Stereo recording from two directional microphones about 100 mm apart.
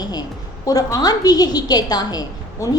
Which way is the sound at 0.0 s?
40° left (ahead or behind).